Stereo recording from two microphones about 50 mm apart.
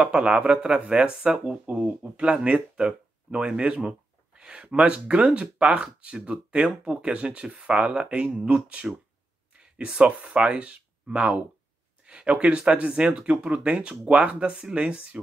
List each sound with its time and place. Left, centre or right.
0.0 s speech: centre